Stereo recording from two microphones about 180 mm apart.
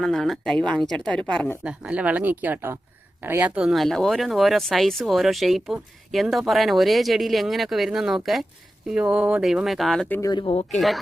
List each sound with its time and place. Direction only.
0.0 s speech: centre (ahead or behind)
1.6 s speech: 5° right (ahead or behind)
10.2 s speech: 20° left (ahead or behind)
10.8 s speech: centre (ahead or behind)